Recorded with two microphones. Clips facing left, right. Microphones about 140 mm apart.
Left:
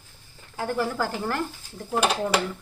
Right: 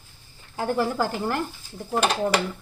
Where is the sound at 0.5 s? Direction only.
25° right (ahead or behind).